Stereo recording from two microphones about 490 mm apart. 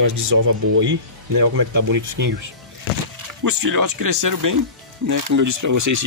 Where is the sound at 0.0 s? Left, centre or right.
Right.